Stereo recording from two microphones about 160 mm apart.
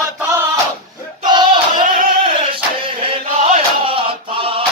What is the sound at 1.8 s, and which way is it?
Singing, 60° right (ahead or behind).